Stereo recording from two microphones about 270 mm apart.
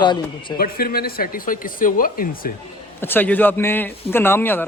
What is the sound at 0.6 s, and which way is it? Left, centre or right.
Speech, left.